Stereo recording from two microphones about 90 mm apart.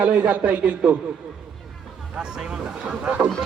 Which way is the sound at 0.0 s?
15° right (ahead or behind).